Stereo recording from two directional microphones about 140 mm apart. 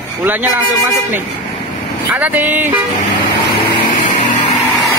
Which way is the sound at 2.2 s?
10° right (ahead or behind).